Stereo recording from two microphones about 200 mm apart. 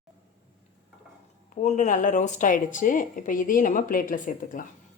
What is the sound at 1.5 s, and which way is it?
A woman's voice, 35° left (ahead or behind).